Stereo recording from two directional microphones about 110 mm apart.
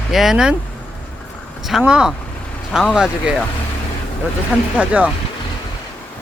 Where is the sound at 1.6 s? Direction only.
5° right (ahead or behind).